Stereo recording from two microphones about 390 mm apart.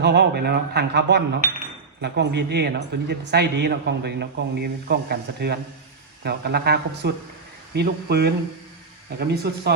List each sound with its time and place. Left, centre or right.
0.0 s a man's voice: right